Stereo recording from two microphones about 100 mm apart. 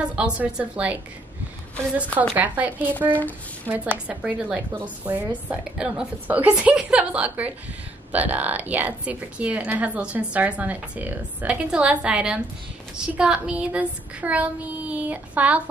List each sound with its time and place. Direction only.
0.0 s a woman's voice: 10° right (ahead or behind)
2.3 s a woman's voice: 15° right (ahead or behind)
3.1 s speech: 15° left (ahead or behind)
3.6 s a woman's voice: 15° right (ahead or behind)